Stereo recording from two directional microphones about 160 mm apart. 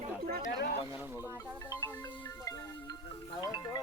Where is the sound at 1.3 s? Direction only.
20° left (ahead or behind).